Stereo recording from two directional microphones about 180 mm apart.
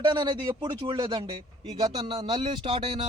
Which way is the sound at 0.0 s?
25° right (ahead or behind).